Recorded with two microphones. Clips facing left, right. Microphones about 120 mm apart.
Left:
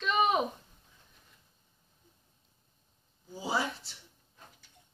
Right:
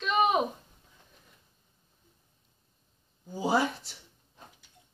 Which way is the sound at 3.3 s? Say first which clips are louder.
Right 6 dB; 55° right (ahead or behind).